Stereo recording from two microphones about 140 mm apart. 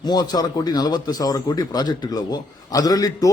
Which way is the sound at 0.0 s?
30° left (ahead or behind).